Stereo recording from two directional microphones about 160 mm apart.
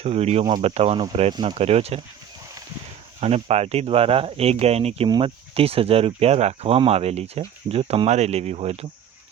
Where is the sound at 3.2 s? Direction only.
40° right (ahead or behind).